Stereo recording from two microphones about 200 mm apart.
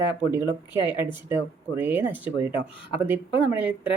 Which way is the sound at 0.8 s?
25° left (ahead or behind).